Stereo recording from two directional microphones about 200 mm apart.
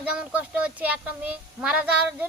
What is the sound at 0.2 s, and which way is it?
A child's voice, 5° right (ahead or behind).